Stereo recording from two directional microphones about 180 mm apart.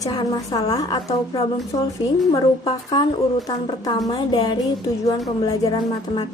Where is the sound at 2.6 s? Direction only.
25° left (ahead or behind).